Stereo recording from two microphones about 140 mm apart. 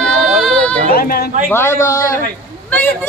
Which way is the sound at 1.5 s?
20° left (ahead or behind).